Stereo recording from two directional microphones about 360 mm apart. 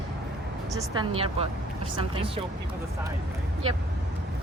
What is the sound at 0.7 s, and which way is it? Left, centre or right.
Speech, centre.